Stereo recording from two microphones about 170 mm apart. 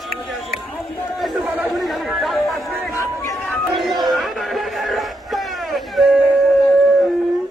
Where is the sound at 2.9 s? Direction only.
15° left (ahead or behind).